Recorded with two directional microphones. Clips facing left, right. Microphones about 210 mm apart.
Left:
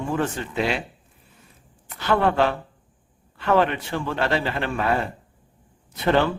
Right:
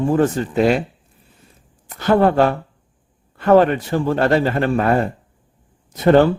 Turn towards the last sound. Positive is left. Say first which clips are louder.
# right 8 dB
turn(degrees=-45)  # may be behind; listen again after turning